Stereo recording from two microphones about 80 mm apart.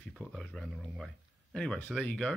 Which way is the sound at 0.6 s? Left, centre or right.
Centre.